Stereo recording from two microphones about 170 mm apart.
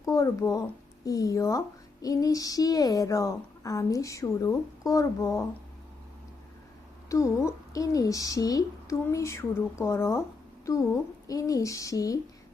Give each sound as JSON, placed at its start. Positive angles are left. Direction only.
{"t": 0.0, "sound": "a child's voice", "side_deg": 20}
{"t": 7.1, "sound": "speech", "side_deg": 20}
{"t": 11.3, "sound": "a child's voice", "side_deg": 20}